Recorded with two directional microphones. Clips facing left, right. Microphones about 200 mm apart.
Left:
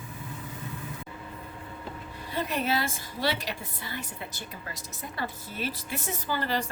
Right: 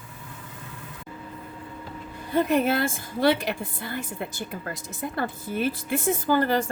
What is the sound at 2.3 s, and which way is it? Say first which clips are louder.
A woman's voice: right 7 dB; 50° right (ahead or behind).